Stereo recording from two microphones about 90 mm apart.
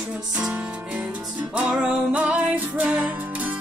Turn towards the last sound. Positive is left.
turn(degrees=-15)  # may be behind; listen again after turning